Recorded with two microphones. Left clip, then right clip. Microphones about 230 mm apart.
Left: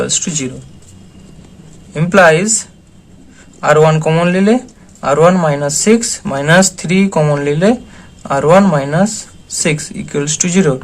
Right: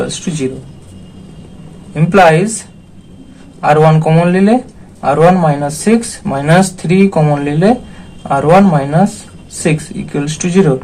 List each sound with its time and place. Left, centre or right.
0.0 s speech: left
1.9 s speech: left